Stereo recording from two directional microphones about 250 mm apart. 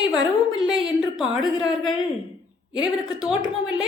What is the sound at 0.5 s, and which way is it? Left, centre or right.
Speech, centre.